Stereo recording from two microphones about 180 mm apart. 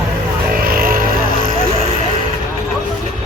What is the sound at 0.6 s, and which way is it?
Vehicle, 55° right (ahead or behind).